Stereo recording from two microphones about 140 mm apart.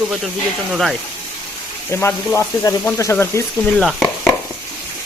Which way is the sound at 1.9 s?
15° left (ahead or behind).